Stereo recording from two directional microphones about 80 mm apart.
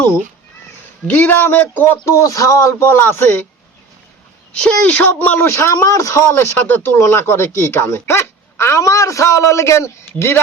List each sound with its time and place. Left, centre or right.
1.0 s speech: left
2.0 s speech: left
2.9 s speech: left
4.5 s speech: centre; by 6.2 s left
6.3 s speech: left